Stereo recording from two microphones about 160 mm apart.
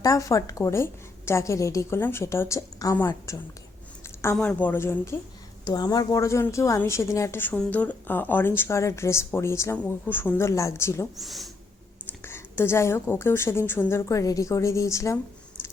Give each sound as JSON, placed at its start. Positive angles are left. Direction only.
{"t": 0.0, "sound": "a woman's voice", "side_deg": 20}
{"t": 4.4, "sound": "a woman's voice", "side_deg": 10}
{"t": 11.2, "sound": "speech", "side_deg": 0}
{"t": 12.2, "sound": "a woman's voice", "side_deg": 15}